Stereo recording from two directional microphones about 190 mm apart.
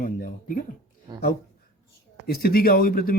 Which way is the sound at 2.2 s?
55° left (ahead or behind).